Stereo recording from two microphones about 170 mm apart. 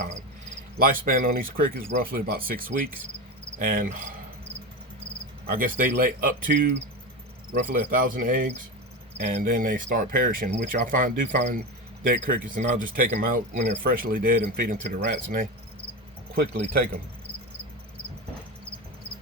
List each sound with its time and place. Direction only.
0.8 s speech: 60° right (ahead or behind)
5.5 s speech: 55° right (ahead or behind)
16.3 s speech: 70° right (ahead or behind)